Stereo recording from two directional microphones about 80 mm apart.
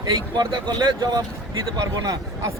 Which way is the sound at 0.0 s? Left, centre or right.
Right.